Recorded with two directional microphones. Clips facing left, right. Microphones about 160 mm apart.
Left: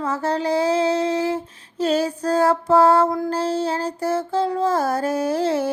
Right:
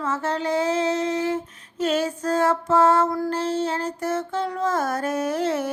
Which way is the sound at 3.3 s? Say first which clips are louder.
Left 2 dB; 35° left (ahead or behind).